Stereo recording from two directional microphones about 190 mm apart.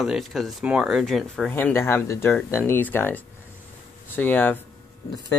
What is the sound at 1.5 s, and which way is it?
Speech, 10° left (ahead or behind).